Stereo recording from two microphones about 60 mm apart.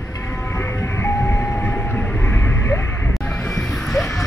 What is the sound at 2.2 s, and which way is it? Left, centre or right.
Vehicle, left.